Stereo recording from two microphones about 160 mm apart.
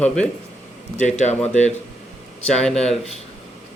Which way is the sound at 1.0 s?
45° left (ahead or behind).